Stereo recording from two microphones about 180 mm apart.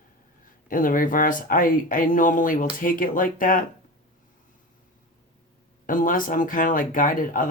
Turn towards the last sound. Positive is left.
turn(degrees=50)  # may be behind; listen again after turning